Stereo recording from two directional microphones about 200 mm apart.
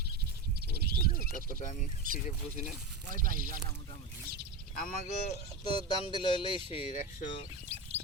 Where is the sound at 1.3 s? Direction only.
40° left (ahead or behind).